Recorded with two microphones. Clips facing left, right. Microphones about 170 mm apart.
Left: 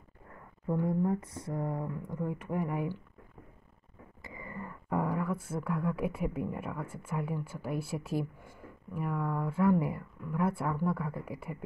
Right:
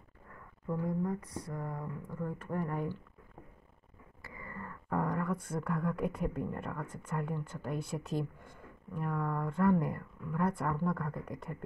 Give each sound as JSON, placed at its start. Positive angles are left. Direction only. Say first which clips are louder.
{"t": 0.7, "sound": "speech", "louder": "left 4 dB", "side_deg": 25}
{"t": 4.2, "sound": "speech", "louder": "left 3 dB", "side_deg": 20}